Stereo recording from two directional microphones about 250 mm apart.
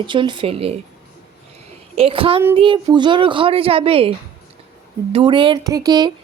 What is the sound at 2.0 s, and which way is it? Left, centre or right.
A woman's voice, right.